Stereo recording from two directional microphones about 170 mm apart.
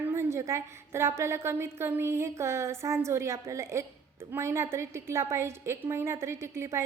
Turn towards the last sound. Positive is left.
turn(degrees=-15)  # may be behind; listen again after turning